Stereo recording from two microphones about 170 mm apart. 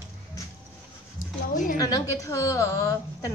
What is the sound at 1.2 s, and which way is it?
Speech, 55° left (ahead or behind).